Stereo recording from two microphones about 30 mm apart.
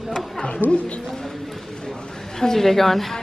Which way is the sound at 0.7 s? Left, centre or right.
Left.